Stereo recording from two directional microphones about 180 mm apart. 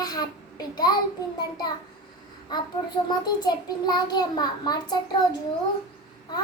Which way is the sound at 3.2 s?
20° left (ahead or behind).